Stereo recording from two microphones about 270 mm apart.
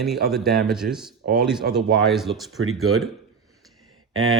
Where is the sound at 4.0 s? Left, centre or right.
Right.